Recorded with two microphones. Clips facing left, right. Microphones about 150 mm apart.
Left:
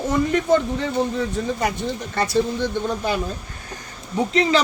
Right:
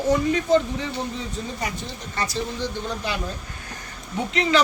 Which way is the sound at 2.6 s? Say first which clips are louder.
Left 5 dB; 50° left (ahead or behind).